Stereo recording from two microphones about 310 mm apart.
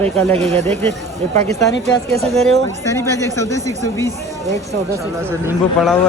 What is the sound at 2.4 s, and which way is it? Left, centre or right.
Speech, centre.